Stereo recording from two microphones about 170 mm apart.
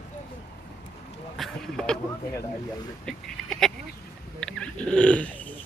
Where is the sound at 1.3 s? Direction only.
Centre (ahead or behind).